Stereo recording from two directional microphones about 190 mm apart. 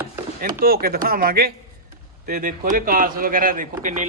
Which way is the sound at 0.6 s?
50° right (ahead or behind).